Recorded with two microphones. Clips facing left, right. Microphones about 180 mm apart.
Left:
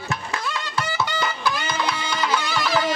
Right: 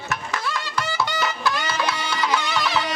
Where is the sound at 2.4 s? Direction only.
Centre (ahead or behind).